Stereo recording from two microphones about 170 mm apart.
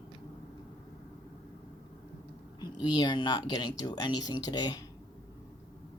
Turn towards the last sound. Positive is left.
turn(degrees=25)  # may be behind; listen again after turning